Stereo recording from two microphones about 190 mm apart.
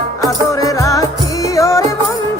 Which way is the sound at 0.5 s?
15° left (ahead or behind).